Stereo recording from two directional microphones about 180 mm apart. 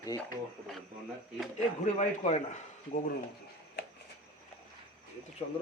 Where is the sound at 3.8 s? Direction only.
70° left (ahead or behind).